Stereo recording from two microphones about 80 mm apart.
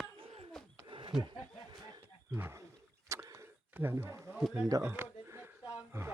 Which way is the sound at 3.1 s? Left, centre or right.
Right.